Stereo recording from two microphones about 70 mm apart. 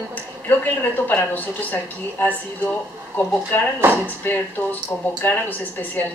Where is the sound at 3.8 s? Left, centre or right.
Right.